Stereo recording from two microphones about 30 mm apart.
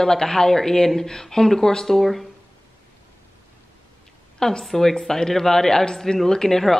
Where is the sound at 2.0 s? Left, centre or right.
Centre.